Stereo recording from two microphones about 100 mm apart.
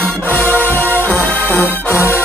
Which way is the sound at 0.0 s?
15° left (ahead or behind).